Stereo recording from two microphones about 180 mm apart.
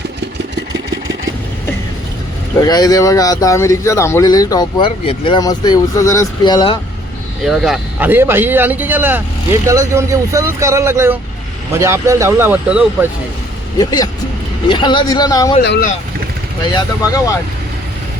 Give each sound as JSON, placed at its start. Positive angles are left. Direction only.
{"t": 2.6, "sound": "speech", "side_deg": 20}
{"t": 7.4, "sound": "speech", "side_deg": 0}
{"t": 13.7, "sound": "speech", "side_deg": 20}
{"t": 15.6, "sound": "speech", "side_deg": 65}